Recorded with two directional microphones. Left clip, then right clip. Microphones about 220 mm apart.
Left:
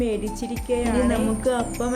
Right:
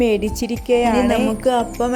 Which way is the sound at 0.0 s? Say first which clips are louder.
Right 8 dB; 40° right (ahead or behind).